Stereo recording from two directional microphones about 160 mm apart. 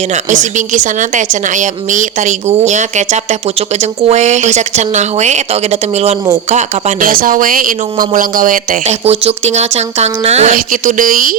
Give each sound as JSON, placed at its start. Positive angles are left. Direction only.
{"t": 0.3, "sound": "a woman's voice", "side_deg": -50}
{"t": 6.5, "sound": "speech", "side_deg": -45}
{"t": 9.0, "sound": "a woman's voice", "side_deg": -45}
{"t": 10.5, "sound": "speech", "side_deg": -55}